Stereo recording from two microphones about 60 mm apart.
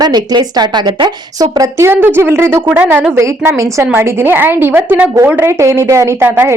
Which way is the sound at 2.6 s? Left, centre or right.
Right.